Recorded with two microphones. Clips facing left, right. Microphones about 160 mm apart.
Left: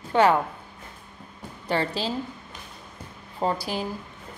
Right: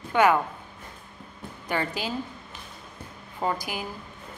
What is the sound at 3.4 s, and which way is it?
Speech, 30° left (ahead or behind).